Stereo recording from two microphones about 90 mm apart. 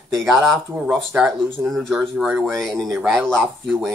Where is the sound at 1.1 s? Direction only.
15° right (ahead or behind).